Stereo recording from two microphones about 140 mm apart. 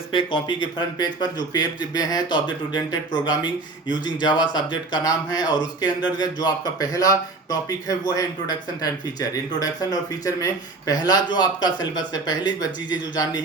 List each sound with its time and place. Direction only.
0.1 s speech: 35° left (ahead or behind)